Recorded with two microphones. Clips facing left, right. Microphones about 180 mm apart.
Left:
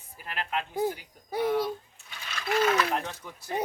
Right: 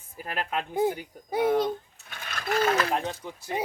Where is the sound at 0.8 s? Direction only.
20° right (ahead or behind).